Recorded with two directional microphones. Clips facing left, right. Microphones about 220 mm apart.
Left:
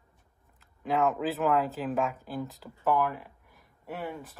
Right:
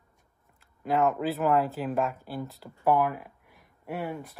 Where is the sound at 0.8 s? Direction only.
Centre (ahead or behind).